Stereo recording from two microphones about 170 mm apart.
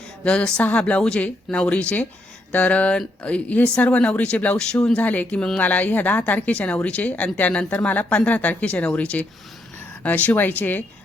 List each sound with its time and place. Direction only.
0.3 s speech: 5° left (ahead or behind)